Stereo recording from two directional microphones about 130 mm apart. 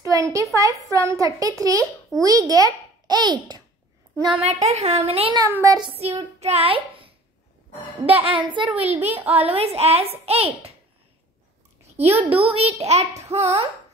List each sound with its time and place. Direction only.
0.0 s a sound: 25° right (ahead or behind)
0.6 s a child's voice: 25° right (ahead or behind)
4.4 s a woman's voice: 55° right (ahead or behind)
5.5 s a child's voice: 25° right (ahead or behind)
5.9 s a woman's voice: 50° right (ahead or behind)
8.7 s a woman's voice: 50° right (ahead or behind)
9.1 s a child's voice: 15° right (ahead or behind)
9.4 s a woman's voice: 50° right (ahead or behind)
12.0 s a woman's voice: 50° right (ahead or behind)